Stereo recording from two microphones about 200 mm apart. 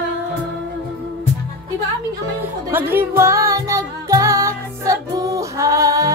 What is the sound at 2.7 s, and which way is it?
Music, 10° right (ahead or behind).